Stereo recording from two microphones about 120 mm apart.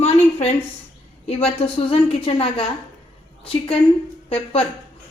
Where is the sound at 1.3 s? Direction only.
60° left (ahead or behind).